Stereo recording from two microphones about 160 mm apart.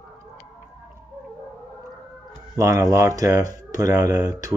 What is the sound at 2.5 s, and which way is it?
Speech, 20° right (ahead or behind).